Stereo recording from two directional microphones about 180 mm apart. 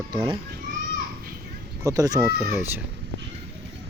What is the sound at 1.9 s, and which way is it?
Speech, 20° right (ahead or behind).